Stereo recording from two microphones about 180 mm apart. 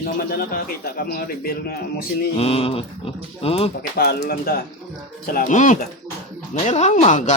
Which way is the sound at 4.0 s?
60° left (ahead or behind).